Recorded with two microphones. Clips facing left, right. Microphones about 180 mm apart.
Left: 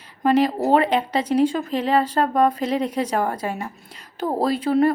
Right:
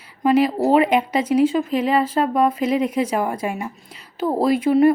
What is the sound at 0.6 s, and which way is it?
A woman's voice, 10° right (ahead or behind).